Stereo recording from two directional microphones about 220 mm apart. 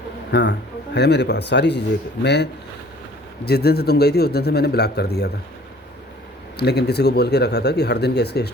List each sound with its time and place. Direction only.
0.3 s a man's voice: 50° left (ahead or behind)
6.6 s speech: 50° left (ahead or behind)